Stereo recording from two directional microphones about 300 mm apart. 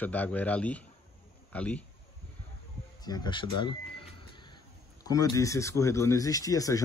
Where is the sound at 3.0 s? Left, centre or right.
Centre.